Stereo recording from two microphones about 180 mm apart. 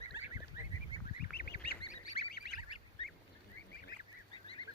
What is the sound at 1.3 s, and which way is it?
Goose, 60° left (ahead or behind).